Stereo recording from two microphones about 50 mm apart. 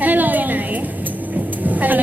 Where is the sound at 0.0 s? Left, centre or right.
Right.